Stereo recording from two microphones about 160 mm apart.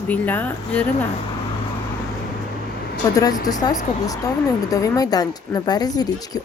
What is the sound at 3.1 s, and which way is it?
Speech, 25° left (ahead or behind).